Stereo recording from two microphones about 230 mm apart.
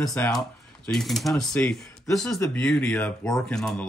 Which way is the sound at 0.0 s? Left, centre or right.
Centre.